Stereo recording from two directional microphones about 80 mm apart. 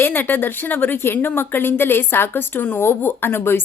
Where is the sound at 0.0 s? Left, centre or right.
Left.